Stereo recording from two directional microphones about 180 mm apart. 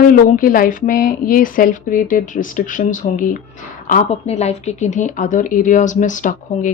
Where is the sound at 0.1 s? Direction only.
50° left (ahead or behind).